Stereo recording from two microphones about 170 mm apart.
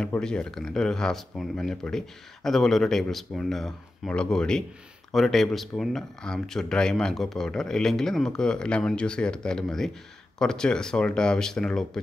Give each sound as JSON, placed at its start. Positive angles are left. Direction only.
{"t": 0.0, "sound": "speech", "side_deg": 5}